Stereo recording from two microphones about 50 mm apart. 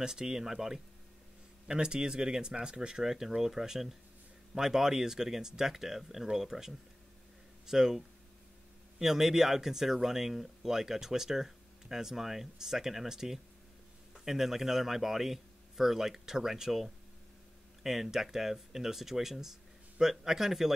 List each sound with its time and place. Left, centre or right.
0.0 s speech: centre
9.0 s speech: centre